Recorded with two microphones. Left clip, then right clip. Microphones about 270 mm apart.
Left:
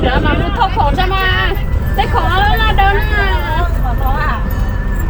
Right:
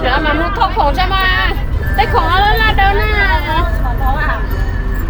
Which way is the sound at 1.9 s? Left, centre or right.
Right.